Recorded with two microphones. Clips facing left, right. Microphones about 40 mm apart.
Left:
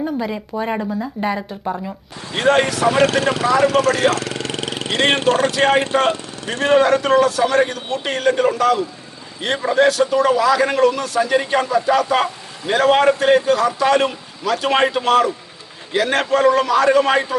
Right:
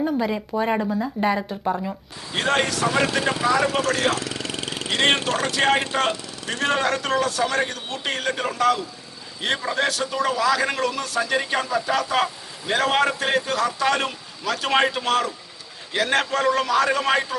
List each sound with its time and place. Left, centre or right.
0.0 s a man's voice: centre
2.8 s speech: left
3.8 s speech: left
4.1 s vehicle: left
5.1 s speech: left
5.5 s a man's voice: centre